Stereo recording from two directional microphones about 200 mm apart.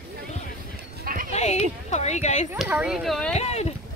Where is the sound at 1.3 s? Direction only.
35° left (ahead or behind).